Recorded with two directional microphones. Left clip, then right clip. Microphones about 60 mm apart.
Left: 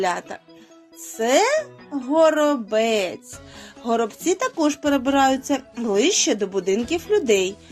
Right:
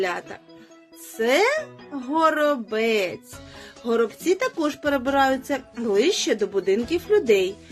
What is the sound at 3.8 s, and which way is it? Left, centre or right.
Speech, centre.